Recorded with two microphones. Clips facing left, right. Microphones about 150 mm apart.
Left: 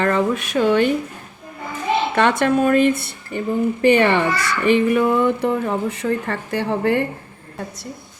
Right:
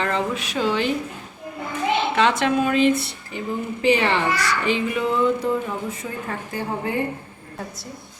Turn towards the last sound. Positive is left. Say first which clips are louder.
# left 6 dB
turn(degrees=75)  # may be behind; listen again after turning